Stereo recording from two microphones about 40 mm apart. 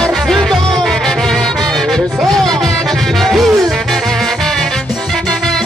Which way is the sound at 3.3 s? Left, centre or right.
Centre.